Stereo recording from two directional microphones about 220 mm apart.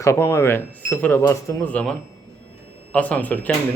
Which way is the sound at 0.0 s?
15° left (ahead or behind).